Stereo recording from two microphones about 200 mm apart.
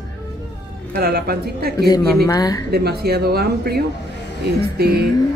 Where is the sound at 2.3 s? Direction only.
15° left (ahead or behind).